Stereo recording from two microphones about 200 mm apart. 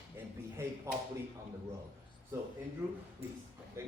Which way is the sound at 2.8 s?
10° right (ahead or behind).